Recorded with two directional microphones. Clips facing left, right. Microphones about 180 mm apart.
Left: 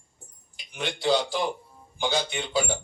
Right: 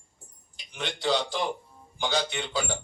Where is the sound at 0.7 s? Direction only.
10° left (ahead or behind).